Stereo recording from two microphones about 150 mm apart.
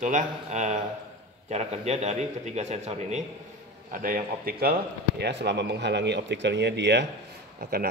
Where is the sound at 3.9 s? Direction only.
70° right (ahead or behind); by 5.8 s 90° right.